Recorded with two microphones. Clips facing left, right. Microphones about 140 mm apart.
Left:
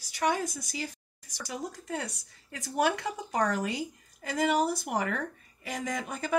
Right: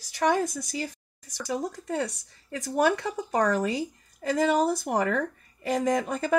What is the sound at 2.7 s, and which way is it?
Speech, 45° right (ahead or behind).